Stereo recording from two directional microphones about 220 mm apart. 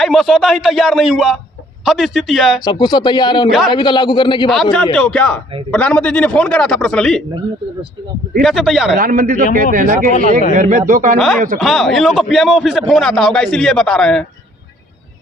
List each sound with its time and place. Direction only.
0.0 s a man's voice: centre (ahead or behind)
2.6 s speech: 20° left (ahead or behind)
4.4 s a man's voice: centre (ahead or behind)
8.4 s a man's voice: centre (ahead or behind)
9.0 s speech: 40° right (ahead or behind)
11.6 s a man's voice: centre (ahead or behind)